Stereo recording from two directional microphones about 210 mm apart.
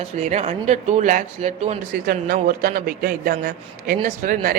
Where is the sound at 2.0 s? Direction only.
45° right (ahead or behind).